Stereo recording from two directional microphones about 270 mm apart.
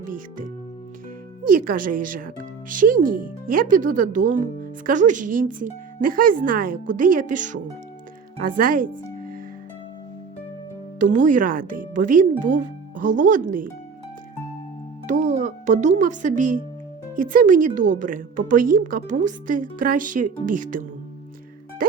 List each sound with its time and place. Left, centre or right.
0.0 s speech: right
1.5 s speech: right
11.0 s speech: right
15.0 s speech: right